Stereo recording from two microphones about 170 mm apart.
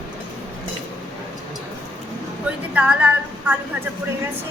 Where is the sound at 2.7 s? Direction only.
10° right (ahead or behind).